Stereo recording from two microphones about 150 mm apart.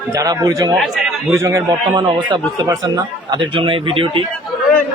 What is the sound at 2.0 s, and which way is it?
Speech, 30° right (ahead or behind).